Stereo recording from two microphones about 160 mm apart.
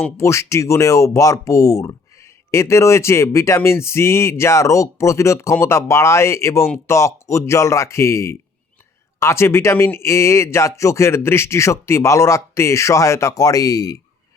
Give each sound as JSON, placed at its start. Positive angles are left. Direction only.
{"t": 0.0, "sound": "speech", "side_deg": 15}